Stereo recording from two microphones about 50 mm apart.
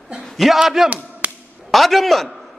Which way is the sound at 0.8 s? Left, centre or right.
Right.